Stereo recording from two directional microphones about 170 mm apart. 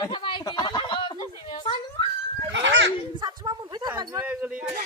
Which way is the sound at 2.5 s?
90° right.